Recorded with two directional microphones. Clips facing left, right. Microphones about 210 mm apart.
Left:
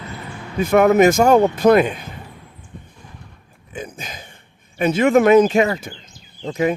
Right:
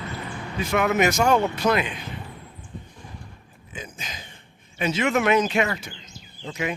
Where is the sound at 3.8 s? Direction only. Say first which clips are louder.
Left 6 dB; 55° left (ahead or behind).